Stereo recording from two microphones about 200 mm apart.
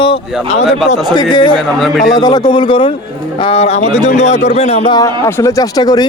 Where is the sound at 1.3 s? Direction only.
25° left (ahead or behind).